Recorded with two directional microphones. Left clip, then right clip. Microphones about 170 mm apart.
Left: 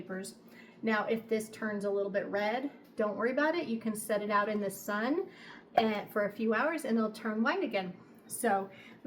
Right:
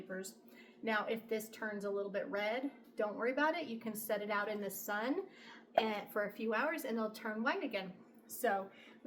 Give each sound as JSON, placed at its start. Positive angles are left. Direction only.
{"t": 0.9, "sound": "a woman's voice", "side_deg": -25}